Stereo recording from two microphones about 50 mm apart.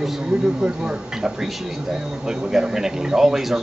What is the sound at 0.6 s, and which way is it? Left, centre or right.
Speech, centre.